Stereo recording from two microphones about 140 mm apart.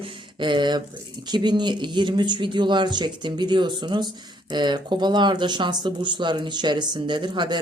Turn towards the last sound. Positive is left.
turn(degrees=-30)  # may be behind; listen again after turning